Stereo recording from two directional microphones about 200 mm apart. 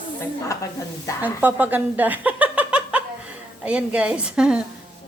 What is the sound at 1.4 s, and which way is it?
Speech, 10° right (ahead or behind).